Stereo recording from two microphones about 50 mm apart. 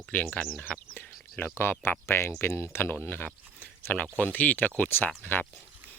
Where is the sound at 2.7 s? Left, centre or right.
Left.